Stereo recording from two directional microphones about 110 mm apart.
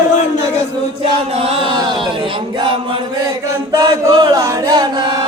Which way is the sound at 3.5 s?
30° right (ahead or behind).